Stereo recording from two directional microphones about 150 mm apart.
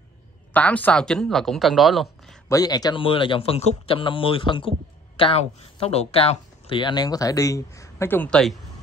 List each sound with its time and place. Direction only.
0.5 s speech: 10° left (ahead or behind)
2.4 s speech: 25° left (ahead or behind); by 8.5 s 5° left (ahead or behind)